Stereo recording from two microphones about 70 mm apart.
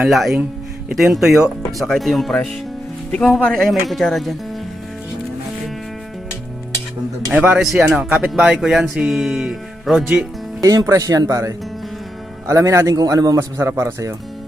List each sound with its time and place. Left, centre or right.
0.1 s speech: centre
3.1 s speech: centre
3.5 s speech: centre
7.3 s speech: right
7.6 s speech: centre
10.6 s speech: right
13.6 s speech: right